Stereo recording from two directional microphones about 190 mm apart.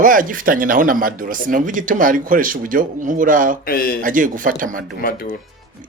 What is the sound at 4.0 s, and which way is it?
Speech, 45° right (ahead or behind).